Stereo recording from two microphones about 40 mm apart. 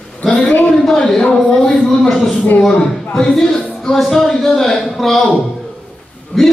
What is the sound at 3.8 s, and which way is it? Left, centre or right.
A man's voice, centre.